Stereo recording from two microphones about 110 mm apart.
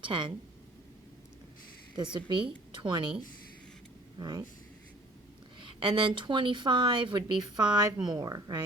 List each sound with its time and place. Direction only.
0.0 s speech: 50° right (ahead or behind)
2.1 s a woman's voice: 45° right (ahead or behind)
4.2 s speech: 40° right (ahead or behind)
5.5 s speech: 50° right (ahead or behind)